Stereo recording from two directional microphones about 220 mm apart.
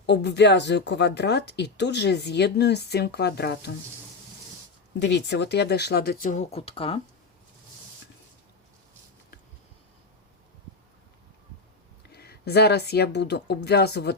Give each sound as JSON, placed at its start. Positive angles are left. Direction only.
{"t": 0.0, "sound": "speech", "side_deg": 50}
{"t": 4.9, "sound": "speech", "side_deg": 50}
{"t": 12.1, "sound": "speech", "side_deg": 45}